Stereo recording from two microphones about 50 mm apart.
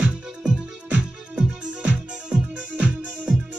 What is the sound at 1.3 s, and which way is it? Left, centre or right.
Music, right.